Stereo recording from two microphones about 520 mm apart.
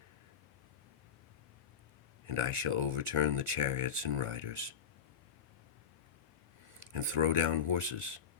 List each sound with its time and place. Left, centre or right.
2.2 s speech: right
6.9 s speech: right